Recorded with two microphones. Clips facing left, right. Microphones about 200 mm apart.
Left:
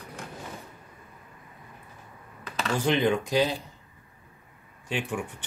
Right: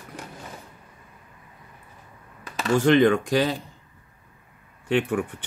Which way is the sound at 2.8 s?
55° right (ahead or behind).